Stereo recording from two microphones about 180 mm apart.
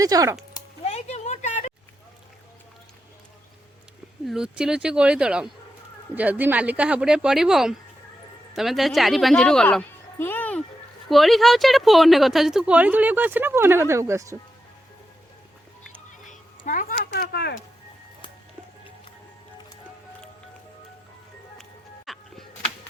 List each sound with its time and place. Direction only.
0.0 s speech: 20° right (ahead or behind)
0.9 s a sound: 35° left (ahead or behind)
4.3 s speech: 5° right (ahead or behind)
16.2 s a sound: 45° left (ahead or behind)
17.1 s speech: 65° left (ahead or behind)
22.0 s music: centre (ahead or behind)